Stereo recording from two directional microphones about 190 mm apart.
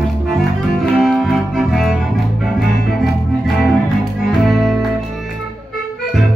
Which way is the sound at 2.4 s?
Centre (ahead or behind).